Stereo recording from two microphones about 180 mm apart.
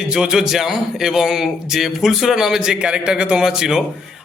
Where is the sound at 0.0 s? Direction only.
5° right (ahead or behind).